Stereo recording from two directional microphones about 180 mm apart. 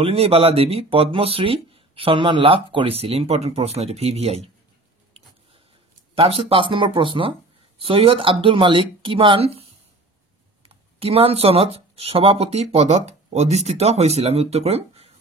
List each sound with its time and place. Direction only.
0.0 s speech: 35° right (ahead or behind)
6.1 s speech: 30° right (ahead or behind)
10.7 s speech: 30° right (ahead or behind)